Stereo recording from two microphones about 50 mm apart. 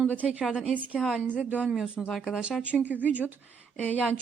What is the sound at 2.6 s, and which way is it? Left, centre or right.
Speech, right.